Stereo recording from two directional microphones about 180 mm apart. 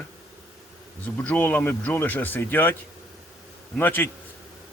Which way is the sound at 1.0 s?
10° left (ahead or behind).